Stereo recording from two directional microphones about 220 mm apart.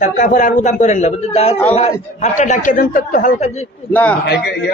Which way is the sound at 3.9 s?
10° left (ahead or behind).